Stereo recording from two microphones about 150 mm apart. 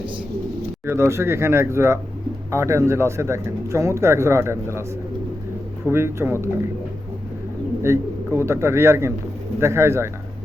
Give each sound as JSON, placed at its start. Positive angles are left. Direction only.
{"t": 0.9, "sound": "speech", "side_deg": -20}
{"t": 5.9, "sound": "speech", "side_deg": -15}
{"t": 7.8, "sound": "a man's voice", "side_deg": -20}